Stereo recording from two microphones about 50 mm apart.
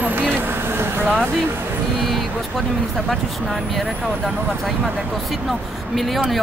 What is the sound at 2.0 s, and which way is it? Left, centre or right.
Speech, centre.